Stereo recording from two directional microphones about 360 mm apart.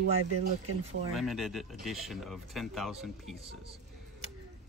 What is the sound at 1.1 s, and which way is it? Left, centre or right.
Speech, centre.